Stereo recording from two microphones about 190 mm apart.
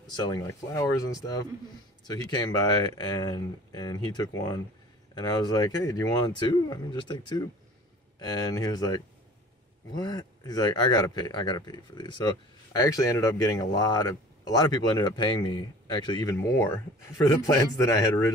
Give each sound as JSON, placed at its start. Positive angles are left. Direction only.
{"t": 0.0, "sound": "speech", "side_deg": 20}
{"t": 16.3, "sound": "a man's voice", "side_deg": 10}